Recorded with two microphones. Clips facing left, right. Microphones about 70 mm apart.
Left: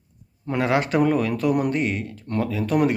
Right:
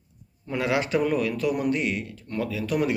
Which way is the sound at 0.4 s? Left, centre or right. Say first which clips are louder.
Left 4 dB; left.